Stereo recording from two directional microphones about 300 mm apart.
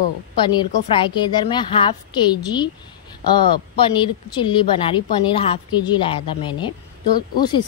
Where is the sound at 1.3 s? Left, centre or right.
Centre.